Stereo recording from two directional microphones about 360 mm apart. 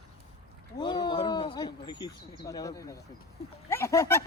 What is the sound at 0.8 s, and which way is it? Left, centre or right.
Speech, centre.